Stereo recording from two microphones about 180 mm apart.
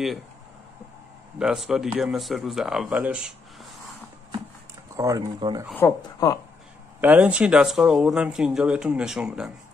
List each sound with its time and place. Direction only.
1.4 s speech: 5° right (ahead or behind)
4.9 s speech: 20° right (ahead or behind)
5.8 s speech: 15° left (ahead or behind)
7.0 s speech: 10° right (ahead or behind)